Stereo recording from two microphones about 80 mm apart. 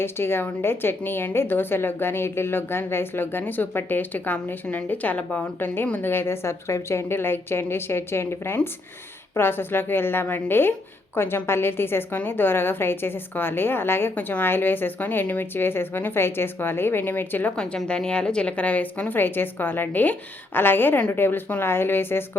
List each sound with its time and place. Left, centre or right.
0.0 s a woman's voice: left
17.6 s a woman's voice: centre; by 22.2 s left